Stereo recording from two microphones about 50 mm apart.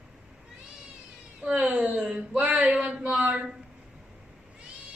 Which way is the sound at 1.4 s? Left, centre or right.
Centre.